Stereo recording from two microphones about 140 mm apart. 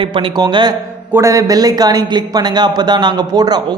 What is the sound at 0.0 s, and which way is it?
A man's voice, 35° right (ahead or behind).